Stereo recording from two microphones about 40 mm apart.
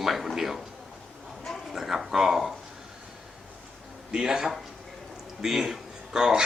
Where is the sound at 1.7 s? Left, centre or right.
Centre.